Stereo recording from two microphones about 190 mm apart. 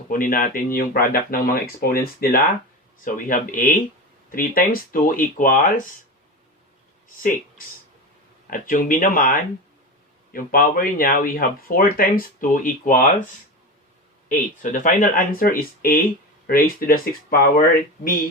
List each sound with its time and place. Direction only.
0.1 s speech: 45° left (ahead or behind)
8.4 s speech: 45° left (ahead or behind)
14.3 s speech: 45° left (ahead or behind)